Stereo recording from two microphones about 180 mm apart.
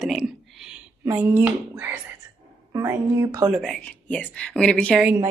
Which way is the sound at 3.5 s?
Centre (ahead or behind).